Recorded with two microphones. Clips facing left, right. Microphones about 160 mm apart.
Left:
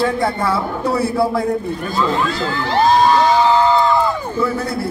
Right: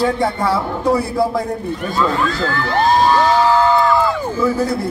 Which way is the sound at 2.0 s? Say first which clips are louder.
Right 1 dB; 20° left (ahead or behind).